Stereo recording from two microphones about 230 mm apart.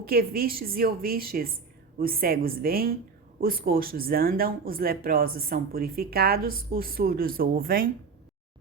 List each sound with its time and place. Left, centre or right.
0.0 s speech: right